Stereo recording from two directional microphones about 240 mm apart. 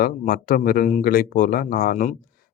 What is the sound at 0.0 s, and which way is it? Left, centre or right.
Speech, left.